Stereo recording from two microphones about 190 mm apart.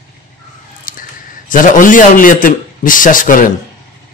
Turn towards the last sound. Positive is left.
turn(degrees=45)  # may be behind; listen again after turning